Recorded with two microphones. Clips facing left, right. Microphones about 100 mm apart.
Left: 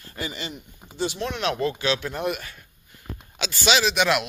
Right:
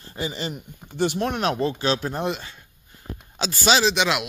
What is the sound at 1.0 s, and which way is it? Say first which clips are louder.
Speech: right 4 dB; 50° right (ahead or behind).